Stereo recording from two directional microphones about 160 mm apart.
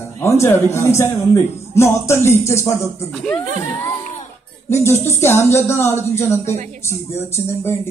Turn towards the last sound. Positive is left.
turn(degrees=15)  # may be behind; listen again after turning